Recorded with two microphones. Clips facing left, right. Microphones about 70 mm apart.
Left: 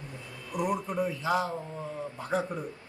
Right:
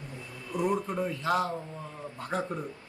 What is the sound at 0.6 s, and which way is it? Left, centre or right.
Speech, centre.